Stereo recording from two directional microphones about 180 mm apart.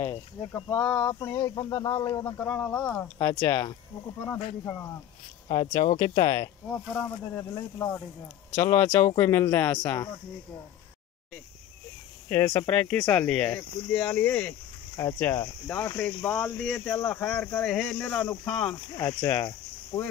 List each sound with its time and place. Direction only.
0.0 s speech: 20° left (ahead or behind)
5.5 s speech: 25° left (ahead or behind)
6.9 s speech: 5° left (ahead or behind)
8.5 s speech: 10° left (ahead or behind)
12.3 s speech: 10° left (ahead or behind)
19.9 s speech: 30° left (ahead or behind)